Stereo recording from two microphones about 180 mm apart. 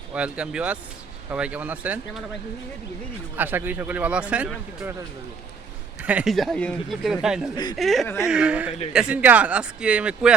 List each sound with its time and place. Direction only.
0.1 s speech: 5° right (ahead or behind)
3.3 s speech: 10° right (ahead or behind)
6.0 s speech: 5° right (ahead or behind)
7.5 s speech: 25° left (ahead or behind)
7.8 s speech: centre (ahead or behind)